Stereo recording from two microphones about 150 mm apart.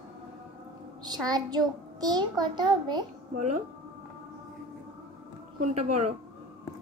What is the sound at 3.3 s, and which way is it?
Speech, 55° right (ahead or behind).